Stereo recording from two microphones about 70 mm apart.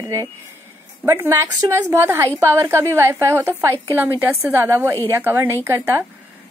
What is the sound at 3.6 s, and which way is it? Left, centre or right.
Speech, right.